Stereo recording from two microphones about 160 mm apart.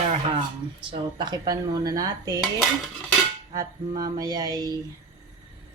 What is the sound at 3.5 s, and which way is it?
Speech, 25° right (ahead or behind).